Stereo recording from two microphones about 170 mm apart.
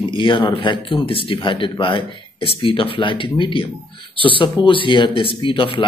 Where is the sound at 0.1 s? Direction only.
30° left (ahead or behind).